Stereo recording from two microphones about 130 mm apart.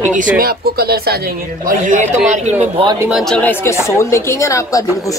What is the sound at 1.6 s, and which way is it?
Speech, 85° right.